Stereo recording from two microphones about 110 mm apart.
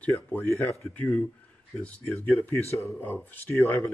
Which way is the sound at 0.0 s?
15° left (ahead or behind).